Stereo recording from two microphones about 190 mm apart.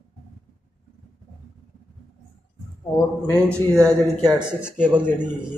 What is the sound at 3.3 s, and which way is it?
Speech, 10° left (ahead or behind).